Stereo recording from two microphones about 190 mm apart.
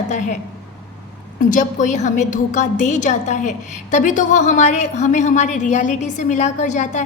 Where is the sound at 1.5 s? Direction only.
40° left (ahead or behind).